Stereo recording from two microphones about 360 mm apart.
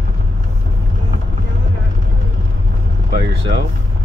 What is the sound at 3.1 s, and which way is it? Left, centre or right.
Speech, right.